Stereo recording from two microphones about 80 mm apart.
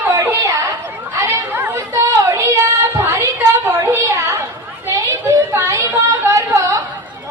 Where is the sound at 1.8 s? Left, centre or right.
Right.